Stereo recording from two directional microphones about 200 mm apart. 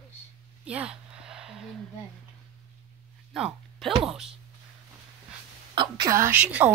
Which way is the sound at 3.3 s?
Centre (ahead or behind).